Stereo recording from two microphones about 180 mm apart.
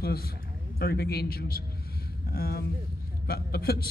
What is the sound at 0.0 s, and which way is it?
A man's voice, 60° left (ahead or behind).